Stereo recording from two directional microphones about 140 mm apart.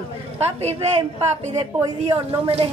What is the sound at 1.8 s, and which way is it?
Speech, 40° right (ahead or behind).